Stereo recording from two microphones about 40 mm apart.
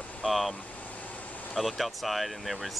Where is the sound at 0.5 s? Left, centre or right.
Left.